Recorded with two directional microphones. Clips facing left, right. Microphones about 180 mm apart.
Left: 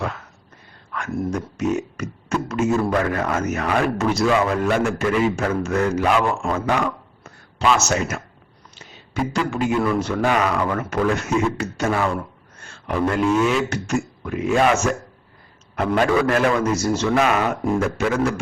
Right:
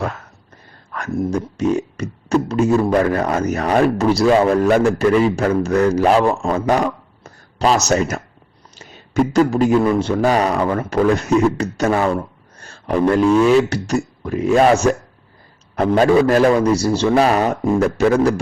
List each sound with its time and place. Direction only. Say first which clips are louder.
0.9 s speech: right 4 dB; 40° right (ahead or behind)
9.3 s speech: right 7 dB; 40° right (ahead or behind)
16.0 s speech: right 6 dB; 30° right (ahead or behind)